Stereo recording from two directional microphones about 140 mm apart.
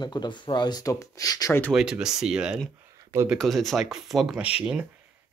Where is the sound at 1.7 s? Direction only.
5° right (ahead or behind).